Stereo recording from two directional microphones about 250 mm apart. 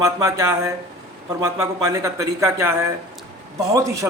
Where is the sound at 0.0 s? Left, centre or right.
Centre.